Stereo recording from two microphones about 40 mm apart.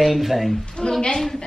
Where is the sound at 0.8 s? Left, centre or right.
Centre.